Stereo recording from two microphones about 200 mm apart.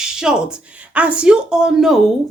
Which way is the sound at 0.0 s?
5° right (ahead or behind).